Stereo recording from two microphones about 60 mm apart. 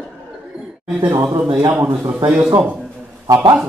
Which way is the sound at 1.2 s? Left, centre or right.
Right.